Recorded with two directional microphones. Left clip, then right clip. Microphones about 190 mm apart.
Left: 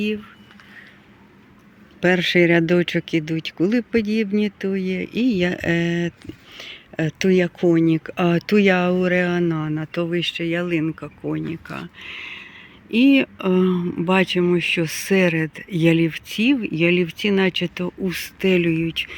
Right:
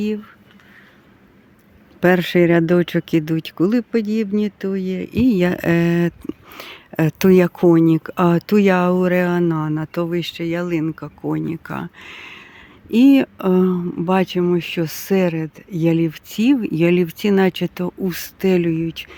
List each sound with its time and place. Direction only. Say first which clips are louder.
2.0 s speech: right 2 dB; 25° right (ahead or behind)